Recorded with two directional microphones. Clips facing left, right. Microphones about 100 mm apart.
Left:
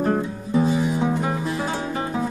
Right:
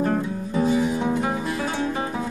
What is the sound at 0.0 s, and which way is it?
Music, 20° left (ahead or behind).